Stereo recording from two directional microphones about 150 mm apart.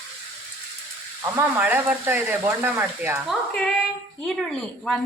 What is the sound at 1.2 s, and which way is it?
Speech, 10° right (ahead or behind).